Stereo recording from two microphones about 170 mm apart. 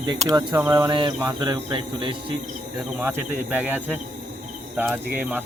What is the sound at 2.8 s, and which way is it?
Speech, 5° right (ahead or behind).